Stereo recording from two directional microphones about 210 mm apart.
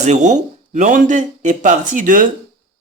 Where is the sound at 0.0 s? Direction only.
35° right (ahead or behind).